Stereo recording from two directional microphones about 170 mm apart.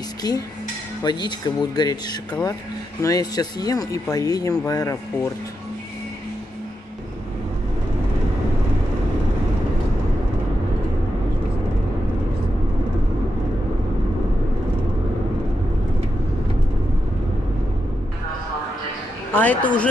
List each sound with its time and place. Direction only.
0.2 s speech: 25° left (ahead or behind)
3.0 s speech: 20° left (ahead or behind)
19.3 s a man's voice: 10° left (ahead or behind)